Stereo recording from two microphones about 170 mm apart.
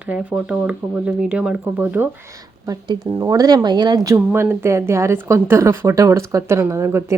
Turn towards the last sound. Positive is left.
turn(degrees=-15)  # may be behind; listen again after turning